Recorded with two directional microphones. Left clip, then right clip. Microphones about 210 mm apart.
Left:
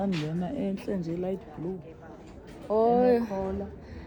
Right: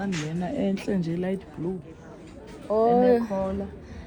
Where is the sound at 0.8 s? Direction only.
45° right (ahead or behind).